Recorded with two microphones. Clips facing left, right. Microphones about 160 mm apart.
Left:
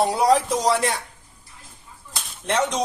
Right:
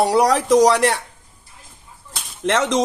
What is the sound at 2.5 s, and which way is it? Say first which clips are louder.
Speech: right 4 dB; 90° right.